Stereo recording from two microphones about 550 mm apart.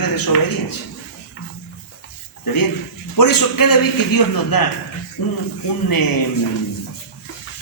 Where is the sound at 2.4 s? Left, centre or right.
Left.